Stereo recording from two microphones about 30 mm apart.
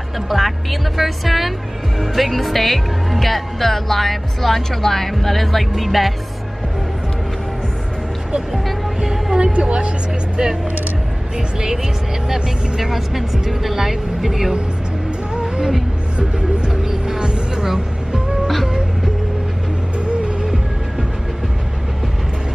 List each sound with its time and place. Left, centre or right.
0.3 s speech: centre
9.0 s speech: centre
9.4 s speech: right
11.3 s speech: right
15.3 s music: right
17.2 s music: right